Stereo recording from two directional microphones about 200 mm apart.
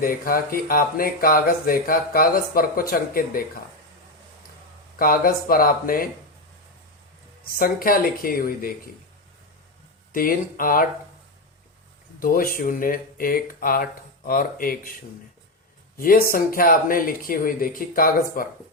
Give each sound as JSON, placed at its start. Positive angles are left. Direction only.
{"t": 0.0, "sound": "speech", "side_deg": 45}
{"t": 4.9, "sound": "speech", "side_deg": 45}
{"t": 7.4, "sound": "speech", "side_deg": 45}
{"t": 10.1, "sound": "speech", "side_deg": 45}
{"t": 12.2, "sound": "speech", "side_deg": 45}
{"t": 16.0, "sound": "speech", "side_deg": 45}